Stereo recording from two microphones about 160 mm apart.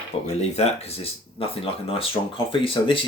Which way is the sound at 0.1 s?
40° left (ahead or behind).